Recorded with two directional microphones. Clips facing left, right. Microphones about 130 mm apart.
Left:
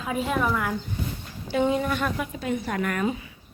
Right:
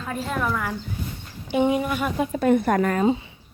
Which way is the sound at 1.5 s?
15° right (ahead or behind).